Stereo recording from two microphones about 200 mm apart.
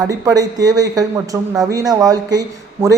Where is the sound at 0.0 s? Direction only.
20° right (ahead or behind).